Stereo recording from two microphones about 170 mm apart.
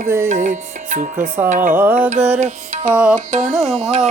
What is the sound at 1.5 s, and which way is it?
Music, 50° right (ahead or behind).